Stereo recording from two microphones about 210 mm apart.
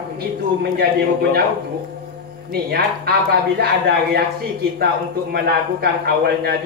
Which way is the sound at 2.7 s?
50° right (ahead or behind).